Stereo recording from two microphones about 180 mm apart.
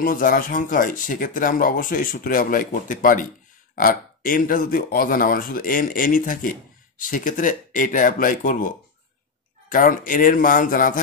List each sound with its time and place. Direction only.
0.0 s speech: 50° left (ahead or behind)